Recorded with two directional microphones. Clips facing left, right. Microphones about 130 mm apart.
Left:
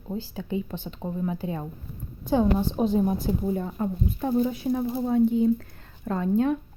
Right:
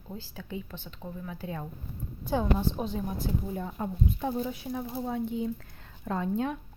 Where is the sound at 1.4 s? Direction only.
10° left (ahead or behind).